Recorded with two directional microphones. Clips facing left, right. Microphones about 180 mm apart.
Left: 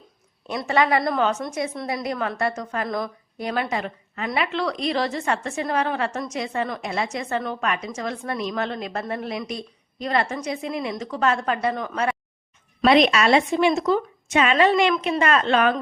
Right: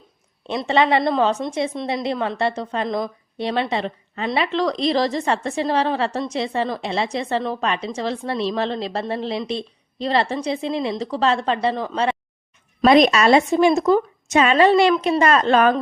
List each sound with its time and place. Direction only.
0.4 s a woman's voice: 25° right (ahead or behind)
12.8 s a woman's voice: 40° right (ahead or behind)